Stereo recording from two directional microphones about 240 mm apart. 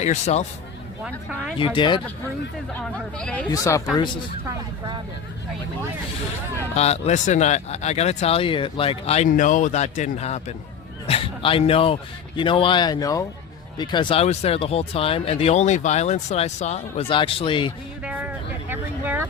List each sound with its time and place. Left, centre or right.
0.0 s speech: left
1.0 s speech: centre
1.5 s speech: left
3.2 s speech: centre
6.7 s speech: left
11.0 s a sound: left
12.4 s speech: left
18.0 s vehicle: centre